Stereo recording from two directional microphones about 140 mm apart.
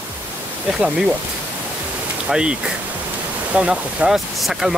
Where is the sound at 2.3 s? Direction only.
5° right (ahead or behind).